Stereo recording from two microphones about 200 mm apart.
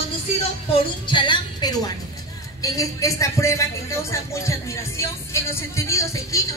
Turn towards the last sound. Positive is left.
turn(degrees=15)  # may be behind; listen again after turning